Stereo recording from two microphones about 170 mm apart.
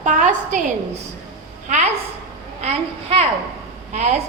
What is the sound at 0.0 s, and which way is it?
A woman's voice, 45° right (ahead or behind).